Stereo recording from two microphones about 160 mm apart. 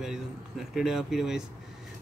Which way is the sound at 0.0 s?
Centre (ahead or behind).